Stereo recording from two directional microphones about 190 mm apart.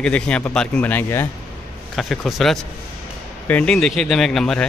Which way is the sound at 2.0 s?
Centre (ahead or behind).